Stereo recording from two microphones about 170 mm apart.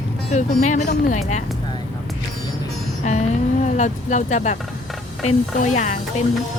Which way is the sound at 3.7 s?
45° left (ahead or behind).